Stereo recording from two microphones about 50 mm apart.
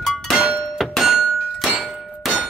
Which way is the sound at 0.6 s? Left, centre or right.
Centre.